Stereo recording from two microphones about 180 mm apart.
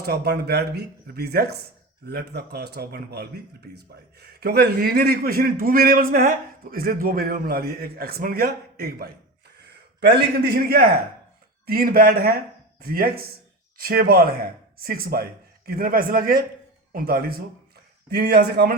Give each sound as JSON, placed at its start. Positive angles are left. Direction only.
{"t": 0.0, "sound": "speech", "side_deg": -65}